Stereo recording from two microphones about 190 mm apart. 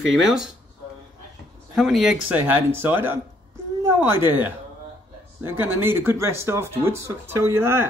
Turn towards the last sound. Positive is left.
turn(degrees=-10)  # may be behind; listen again after turning